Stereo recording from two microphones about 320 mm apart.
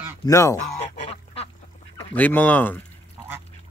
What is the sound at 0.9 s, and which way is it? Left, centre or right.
Duck, centre.